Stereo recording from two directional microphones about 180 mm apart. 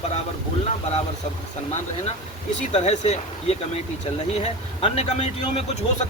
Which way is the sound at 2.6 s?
40° left (ahead or behind).